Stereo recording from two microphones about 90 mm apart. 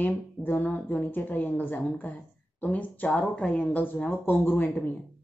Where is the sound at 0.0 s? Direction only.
20° left (ahead or behind).